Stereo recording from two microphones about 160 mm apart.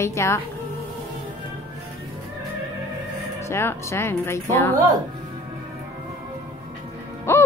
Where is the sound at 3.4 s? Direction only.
15° left (ahead or behind).